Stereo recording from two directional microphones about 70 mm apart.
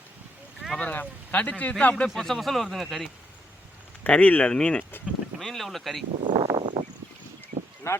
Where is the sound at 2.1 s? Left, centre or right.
Centre.